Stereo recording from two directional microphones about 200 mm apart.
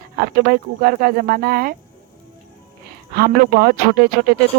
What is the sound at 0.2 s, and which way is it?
Speech, 50° right (ahead or behind).